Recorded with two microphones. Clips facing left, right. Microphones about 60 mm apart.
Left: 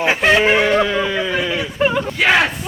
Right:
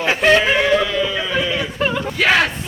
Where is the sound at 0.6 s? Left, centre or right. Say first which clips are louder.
Left 1 dB; left.